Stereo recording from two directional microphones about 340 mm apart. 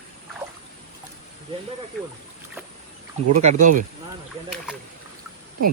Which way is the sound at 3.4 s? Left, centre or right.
Right.